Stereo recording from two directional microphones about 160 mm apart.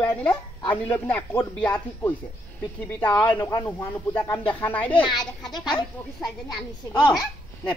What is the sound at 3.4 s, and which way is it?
Speech, 25° left (ahead or behind).